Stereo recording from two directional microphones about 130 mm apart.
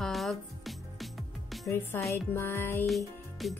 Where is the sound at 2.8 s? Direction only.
Centre (ahead or behind).